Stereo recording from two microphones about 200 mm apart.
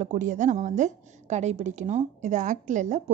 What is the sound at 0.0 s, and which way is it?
A woman's voice, 40° right (ahead or behind).